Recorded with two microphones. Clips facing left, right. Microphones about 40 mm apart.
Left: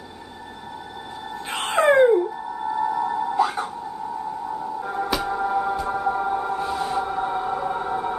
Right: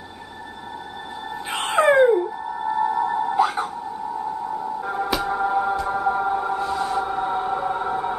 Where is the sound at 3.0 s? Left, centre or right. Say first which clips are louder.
Right 2 dB; centre.